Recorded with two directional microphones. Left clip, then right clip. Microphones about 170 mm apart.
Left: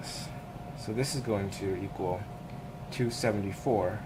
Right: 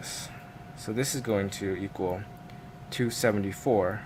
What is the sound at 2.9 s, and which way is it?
Speech, 35° right (ahead or behind).